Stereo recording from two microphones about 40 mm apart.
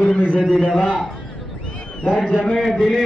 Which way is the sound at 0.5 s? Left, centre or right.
Centre.